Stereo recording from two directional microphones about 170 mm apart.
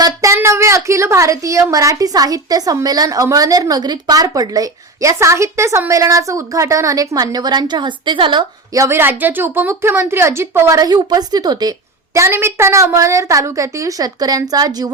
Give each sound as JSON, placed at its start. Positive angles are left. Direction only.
{"t": 0.0, "sound": "a woman's voice", "side_deg": -20}